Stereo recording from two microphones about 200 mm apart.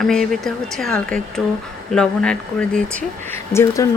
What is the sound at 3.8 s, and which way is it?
Speech, 15° left (ahead or behind).